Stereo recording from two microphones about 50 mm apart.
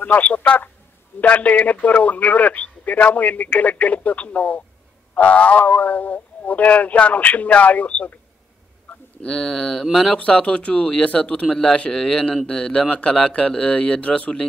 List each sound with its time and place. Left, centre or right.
0.0 s speech: left
9.2 s speech: centre
10.1 s speech: left